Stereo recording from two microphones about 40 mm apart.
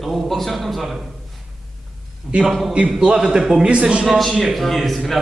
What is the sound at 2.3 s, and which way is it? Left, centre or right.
Speech, right.